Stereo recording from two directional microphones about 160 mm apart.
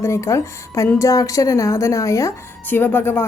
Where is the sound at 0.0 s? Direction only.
20° left (ahead or behind).